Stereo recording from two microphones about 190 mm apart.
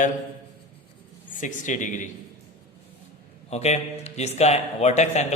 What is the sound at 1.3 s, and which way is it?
Speech, 45° left (ahead or behind).